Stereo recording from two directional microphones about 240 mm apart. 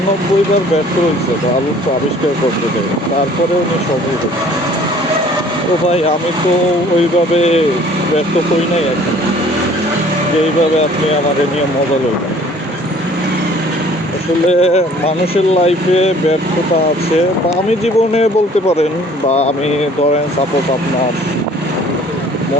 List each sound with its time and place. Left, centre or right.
7.3 s speech: left
14.6 s speech: left
17.7 s speech: left